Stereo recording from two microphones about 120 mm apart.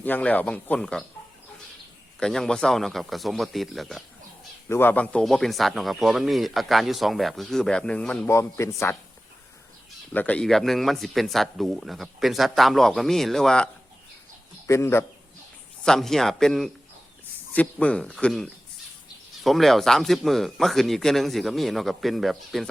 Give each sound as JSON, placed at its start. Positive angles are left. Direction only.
{"t": 0.0, "sound": "speech", "side_deg": 15}
{"t": 2.1, "sound": "speech", "side_deg": 5}
{"t": 4.7, "sound": "speech", "side_deg": 15}
{"t": 5.2, "sound": "speech", "side_deg": 0}
{"t": 8.3, "sound": "speech", "side_deg": 25}
{"t": 10.1, "sound": "speech", "side_deg": 10}
{"t": 14.7, "sound": "speech", "side_deg": 20}
{"t": 15.8, "sound": "speech", "side_deg": 5}